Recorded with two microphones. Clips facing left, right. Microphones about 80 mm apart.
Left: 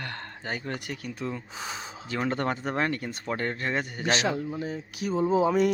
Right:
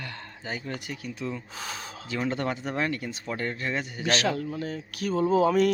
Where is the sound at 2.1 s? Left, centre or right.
Left.